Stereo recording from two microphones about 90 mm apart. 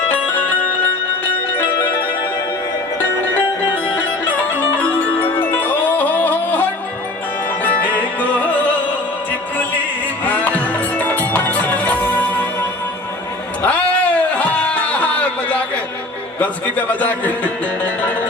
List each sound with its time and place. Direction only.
4.4 s music: 20° left (ahead or behind)
10.2 s music: 20° left (ahead or behind)
13.6 s music: 15° left (ahead or behind)
16.4 s a man's voice: 20° left (ahead or behind)